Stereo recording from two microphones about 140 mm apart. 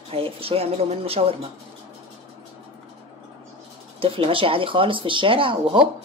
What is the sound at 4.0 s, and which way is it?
Speech, 40° right (ahead or behind).